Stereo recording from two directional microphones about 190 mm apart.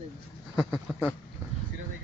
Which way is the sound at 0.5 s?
Centre (ahead or behind).